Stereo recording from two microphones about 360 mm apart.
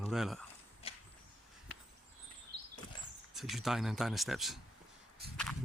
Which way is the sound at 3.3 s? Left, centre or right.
Centre.